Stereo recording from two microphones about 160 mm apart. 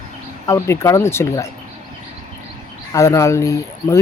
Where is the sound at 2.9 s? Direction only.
20° left (ahead or behind).